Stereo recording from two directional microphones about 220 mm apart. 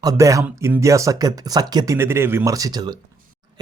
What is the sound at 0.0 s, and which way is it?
Speech, 15° right (ahead or behind).